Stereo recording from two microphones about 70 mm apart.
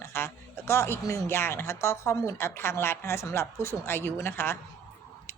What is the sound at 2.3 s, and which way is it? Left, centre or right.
A woman's voice, left.